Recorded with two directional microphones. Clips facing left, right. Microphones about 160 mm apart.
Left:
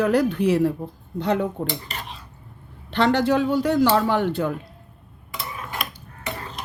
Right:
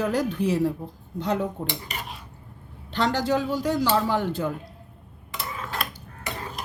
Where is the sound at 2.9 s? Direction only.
65° left (ahead or behind).